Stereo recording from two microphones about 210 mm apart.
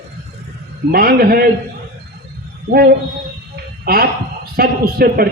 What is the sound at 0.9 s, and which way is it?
Speech, 45° right (ahead or behind).